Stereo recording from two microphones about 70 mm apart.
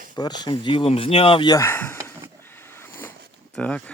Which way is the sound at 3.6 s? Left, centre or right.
Centre.